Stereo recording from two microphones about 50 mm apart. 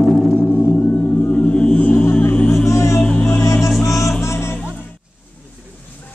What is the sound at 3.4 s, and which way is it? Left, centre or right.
Music, left.